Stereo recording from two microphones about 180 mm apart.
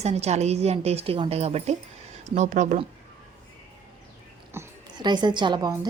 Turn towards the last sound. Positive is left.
turn(degrees=-25)  # may be behind; listen again after turning